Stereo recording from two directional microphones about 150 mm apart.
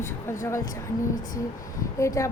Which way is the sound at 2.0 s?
20° left (ahead or behind).